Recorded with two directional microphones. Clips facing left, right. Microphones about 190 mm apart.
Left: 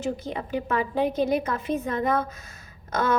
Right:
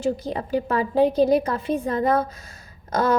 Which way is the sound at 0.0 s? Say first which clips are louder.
Right 5 dB; 35° right (ahead or behind).